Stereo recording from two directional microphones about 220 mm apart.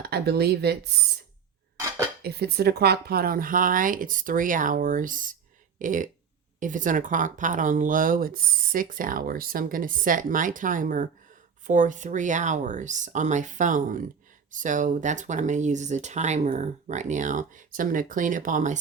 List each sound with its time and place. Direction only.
0.0 s speech: 45° right (ahead or behind)
2.2 s speech: 45° right (ahead or behind)